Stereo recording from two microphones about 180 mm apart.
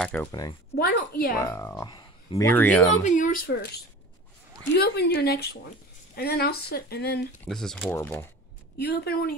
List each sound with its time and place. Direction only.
0.0 s speech: 10° left (ahead or behind)
0.3 s speech: 20° left (ahead or behind)
0.7 s speech: 60° left (ahead or behind)
1.4 s speech: 15° left (ahead or behind)
3.0 s speech: 45° left (ahead or behind)
4.7 s speech: 65° left (ahead or behind)
7.4 s speech: 5° left (ahead or behind)
8.7 s speech: 65° left (ahead or behind)